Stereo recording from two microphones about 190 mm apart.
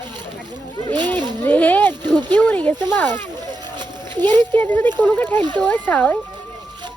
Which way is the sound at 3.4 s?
20° right (ahead or behind).